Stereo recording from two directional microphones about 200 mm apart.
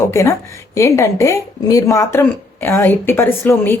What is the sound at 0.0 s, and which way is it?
Speech, 15° left (ahead or behind).